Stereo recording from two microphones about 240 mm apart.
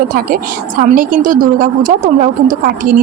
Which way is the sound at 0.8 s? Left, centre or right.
Right.